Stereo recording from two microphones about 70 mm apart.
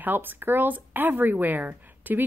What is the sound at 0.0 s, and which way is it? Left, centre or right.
A woman's voice, right.